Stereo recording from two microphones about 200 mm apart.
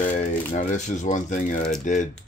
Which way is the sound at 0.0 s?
40° left (ahead or behind).